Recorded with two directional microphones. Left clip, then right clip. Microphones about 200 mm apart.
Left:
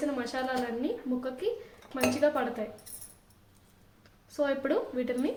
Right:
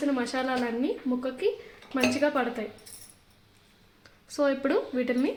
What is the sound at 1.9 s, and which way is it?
Speech, 55° right (ahead or behind).